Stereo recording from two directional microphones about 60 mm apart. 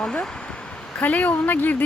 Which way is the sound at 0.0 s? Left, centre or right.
Centre.